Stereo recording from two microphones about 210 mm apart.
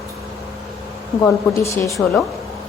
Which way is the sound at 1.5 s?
15° left (ahead or behind).